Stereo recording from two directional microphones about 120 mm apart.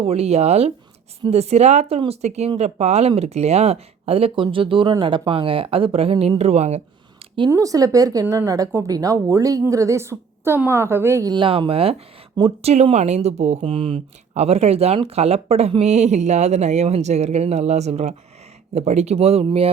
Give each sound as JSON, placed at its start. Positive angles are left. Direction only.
{"t": 0.0, "sound": "speech", "side_deg": -60}
{"t": 7.5, "sound": "speech", "side_deg": -30}
{"t": 11.3, "sound": "speech", "side_deg": -45}
{"t": 12.7, "sound": "a woman's voice", "side_deg": -65}
{"t": 13.6, "sound": "speech", "side_deg": -50}